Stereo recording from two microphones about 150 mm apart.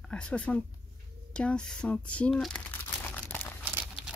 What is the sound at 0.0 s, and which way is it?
Speech, 5° left (ahead or behind).